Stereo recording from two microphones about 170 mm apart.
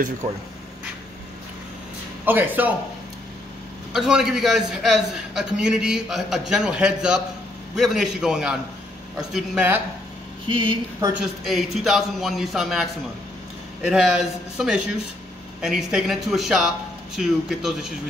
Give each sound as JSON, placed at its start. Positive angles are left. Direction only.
{"t": 2.2, "sound": "speech", "side_deg": -10}
{"t": 3.9, "sound": "a man's voice", "side_deg": -5}
{"t": 10.5, "sound": "speech", "side_deg": -30}
{"t": 11.4, "sound": "a man's voice", "side_deg": 0}
{"t": 13.8, "sound": "a man's voice", "side_deg": 0}